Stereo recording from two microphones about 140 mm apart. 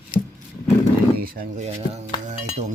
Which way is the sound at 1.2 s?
90° right.